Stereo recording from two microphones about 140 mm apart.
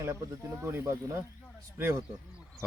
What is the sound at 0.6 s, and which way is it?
Speech, 20° right (ahead or behind).